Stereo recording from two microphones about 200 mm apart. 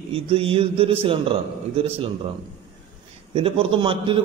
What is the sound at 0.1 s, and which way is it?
A man's voice, 25° right (ahead or behind).